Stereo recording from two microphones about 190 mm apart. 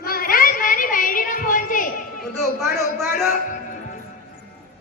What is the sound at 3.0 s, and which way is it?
Speech, centre (ahead or behind).